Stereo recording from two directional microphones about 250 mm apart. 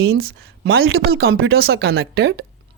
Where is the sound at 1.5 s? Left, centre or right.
Right.